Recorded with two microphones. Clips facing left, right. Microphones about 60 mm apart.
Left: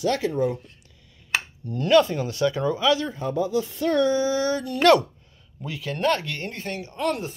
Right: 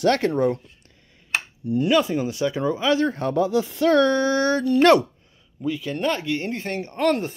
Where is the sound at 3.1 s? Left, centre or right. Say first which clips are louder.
Right 4 dB; right.